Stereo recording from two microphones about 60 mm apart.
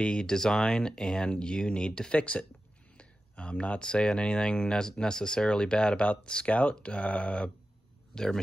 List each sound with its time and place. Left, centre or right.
0.0 s speech: centre
8.1 s speech: centre